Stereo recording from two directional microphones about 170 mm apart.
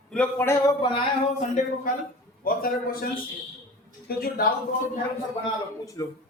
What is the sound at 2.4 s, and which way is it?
A man's voice, 60° left (ahead or behind).